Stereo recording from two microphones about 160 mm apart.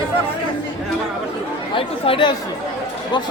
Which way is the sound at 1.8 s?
35° left (ahead or behind).